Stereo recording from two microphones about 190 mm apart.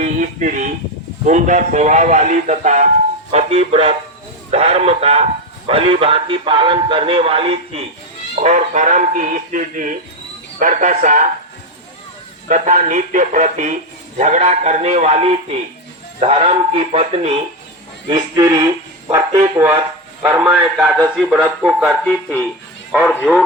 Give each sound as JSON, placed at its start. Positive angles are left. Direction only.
{"t": 0.0, "sound": "speech", "side_deg": -40}
{"t": 12.5, "sound": "speech", "side_deg": -40}
{"t": 18.1, "sound": "a man's voice", "side_deg": -20}